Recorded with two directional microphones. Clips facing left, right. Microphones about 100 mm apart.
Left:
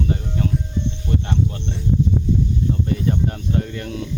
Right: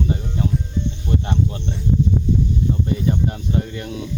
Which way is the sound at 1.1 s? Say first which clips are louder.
Right 1 dB; 20° right (ahead or behind).